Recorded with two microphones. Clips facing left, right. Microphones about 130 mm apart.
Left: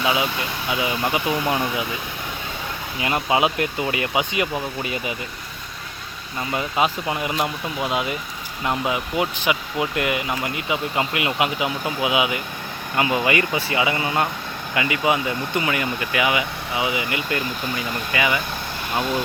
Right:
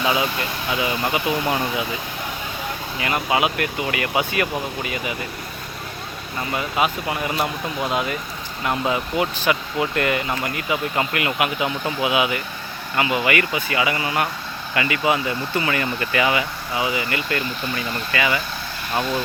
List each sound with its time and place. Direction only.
0.0 s speech: 15° left (ahead or behind)
1.2 s speech: 20° right (ahead or behind)
3.0 s speech: 25° left (ahead or behind)
6.5 s speech: 25° left (ahead or behind)